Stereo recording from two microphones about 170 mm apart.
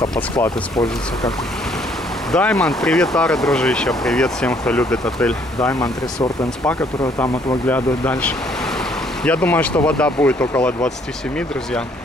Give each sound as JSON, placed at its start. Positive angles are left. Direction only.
{"t": 0.4, "sound": "speech", "side_deg": 20}
{"t": 2.3, "sound": "speech", "side_deg": 5}
{"t": 5.6, "sound": "speech", "side_deg": 20}